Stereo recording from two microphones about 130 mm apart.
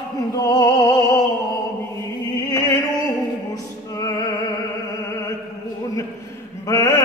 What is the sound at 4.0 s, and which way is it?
Music, 25° left (ahead or behind).